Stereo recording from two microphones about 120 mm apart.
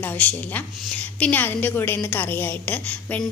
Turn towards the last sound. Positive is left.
turn(degrees=15)  # may be behind; listen again after turning